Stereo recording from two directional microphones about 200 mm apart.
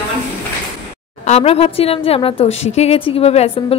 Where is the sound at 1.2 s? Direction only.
35° left (ahead or behind).